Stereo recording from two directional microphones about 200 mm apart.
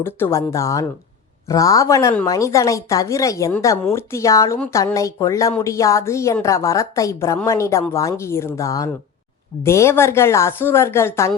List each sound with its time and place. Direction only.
0.0 s speech: 10° left (ahead or behind)